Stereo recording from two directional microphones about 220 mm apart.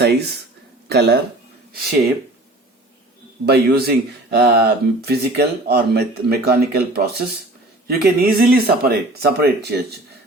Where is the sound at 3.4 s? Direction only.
45° right (ahead or behind).